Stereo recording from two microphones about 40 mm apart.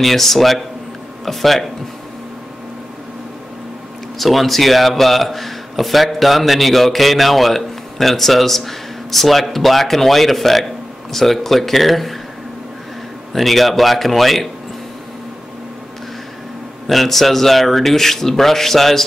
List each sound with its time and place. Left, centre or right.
0.0 s a man's voice: centre
4.2 s a man's voice: centre
13.3 s a man's voice: centre
16.8 s a man's voice: centre